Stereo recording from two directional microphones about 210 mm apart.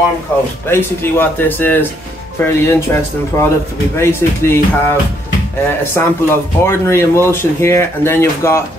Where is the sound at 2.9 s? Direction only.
15° left (ahead or behind).